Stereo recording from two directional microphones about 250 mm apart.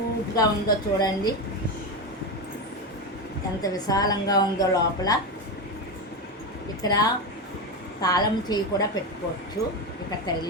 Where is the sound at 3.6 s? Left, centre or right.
Centre.